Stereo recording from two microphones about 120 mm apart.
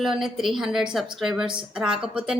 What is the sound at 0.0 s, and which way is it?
A woman's voice, 5° right (ahead or behind).